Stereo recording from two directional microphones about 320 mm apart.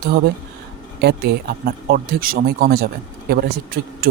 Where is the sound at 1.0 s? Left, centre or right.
Right.